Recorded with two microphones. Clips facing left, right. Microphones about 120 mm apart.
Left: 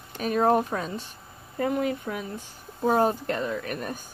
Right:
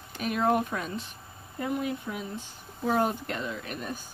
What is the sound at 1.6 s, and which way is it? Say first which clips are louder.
Speech: left 5 dB; 55° left (ahead or behind).